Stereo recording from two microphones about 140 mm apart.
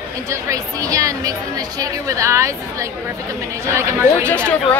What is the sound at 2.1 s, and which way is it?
Speech, 20° right (ahead or behind).